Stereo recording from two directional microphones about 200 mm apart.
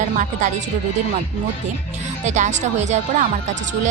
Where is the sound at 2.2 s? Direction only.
35° right (ahead or behind).